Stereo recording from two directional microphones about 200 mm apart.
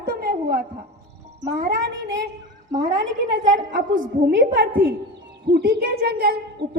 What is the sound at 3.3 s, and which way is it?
Speech, 70° right (ahead or behind).